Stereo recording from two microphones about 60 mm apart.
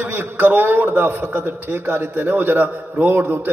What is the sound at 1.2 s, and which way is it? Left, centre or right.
Speech, right.